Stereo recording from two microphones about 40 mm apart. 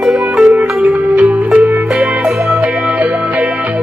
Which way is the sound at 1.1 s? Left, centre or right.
Right.